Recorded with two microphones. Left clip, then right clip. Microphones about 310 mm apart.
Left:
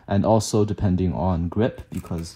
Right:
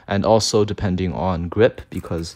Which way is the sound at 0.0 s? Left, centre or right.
Left.